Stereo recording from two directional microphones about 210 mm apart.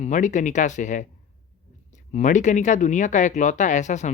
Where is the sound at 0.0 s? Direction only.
35° left (ahead or behind).